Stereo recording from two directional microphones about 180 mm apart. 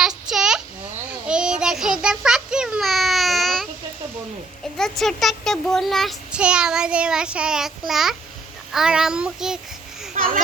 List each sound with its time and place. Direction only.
0.0 s child singing: 5° right (ahead or behind)
4.8 s a child's voice: centre (ahead or behind)
10.2 s speech: 50° right (ahead or behind)